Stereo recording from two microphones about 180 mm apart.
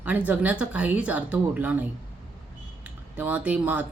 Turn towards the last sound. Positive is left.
turn(degrees=-10)  # may be behind; listen again after turning